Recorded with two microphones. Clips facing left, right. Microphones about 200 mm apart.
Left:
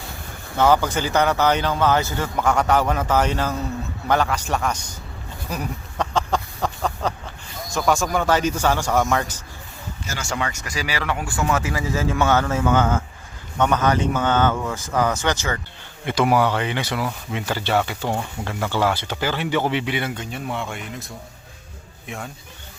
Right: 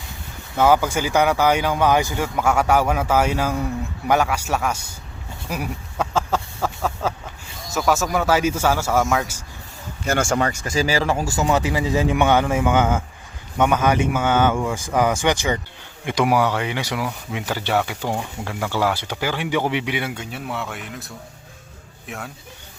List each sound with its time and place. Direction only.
0.5 s speech: 10° right (ahead or behind)
5.5 s a sound: 10° right (ahead or behind)
7.7 s a man's voice: 5° right (ahead or behind)
10.1 s speech: 50° right (ahead or behind)
10.6 s speech: 30° right (ahead or behind)
11.4 s speech: 20° right (ahead or behind); by 22.3 s 5° right (ahead or behind)